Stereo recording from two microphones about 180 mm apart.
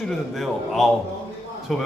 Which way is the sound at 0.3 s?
Centre (ahead or behind).